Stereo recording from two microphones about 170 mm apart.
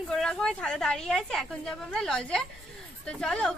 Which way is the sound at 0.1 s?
Centre (ahead or behind).